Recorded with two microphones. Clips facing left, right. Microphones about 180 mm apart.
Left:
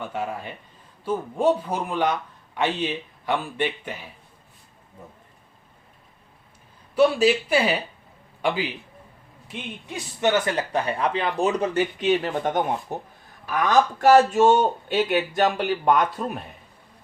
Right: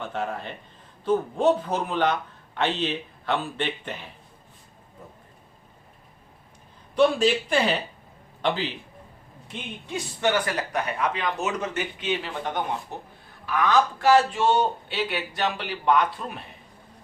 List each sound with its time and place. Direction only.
0.0 s speech: 10° left (ahead or behind)
6.9 s a man's voice: 5° left (ahead or behind)
9.9 s a man's voice: 20° left (ahead or behind); by 16.4 s 45° left (ahead or behind)